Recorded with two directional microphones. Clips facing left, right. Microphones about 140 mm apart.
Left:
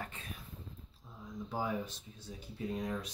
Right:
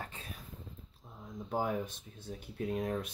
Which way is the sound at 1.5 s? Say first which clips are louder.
Right 3 dB; 50° right (ahead or behind).